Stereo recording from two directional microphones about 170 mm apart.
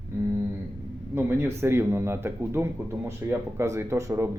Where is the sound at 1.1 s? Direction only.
15° right (ahead or behind).